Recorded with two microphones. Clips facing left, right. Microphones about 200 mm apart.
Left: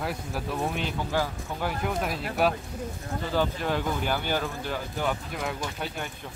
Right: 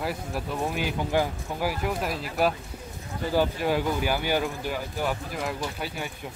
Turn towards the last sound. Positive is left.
turn(degrees=-5)  # may be behind; listen again after turning